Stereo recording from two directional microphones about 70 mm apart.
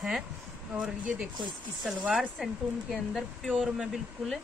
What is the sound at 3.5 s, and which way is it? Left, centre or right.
Speech, centre.